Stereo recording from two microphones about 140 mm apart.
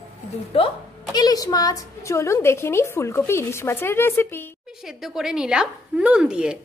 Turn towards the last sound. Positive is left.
turn(degrees=-5)  # may be behind; listen again after turning